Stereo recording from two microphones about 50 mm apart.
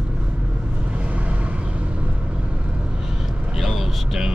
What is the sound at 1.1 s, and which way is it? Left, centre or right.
Vehicle, right.